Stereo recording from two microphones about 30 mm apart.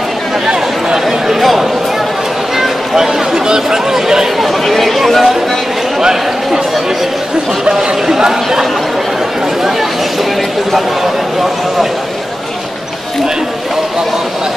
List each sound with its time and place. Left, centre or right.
0.5 s chatter: right
1.0 s a sound: centre
3.4 s chatter: centre
4.4 s chatter: centre
5.9 s speech: right
7.7 s speech: centre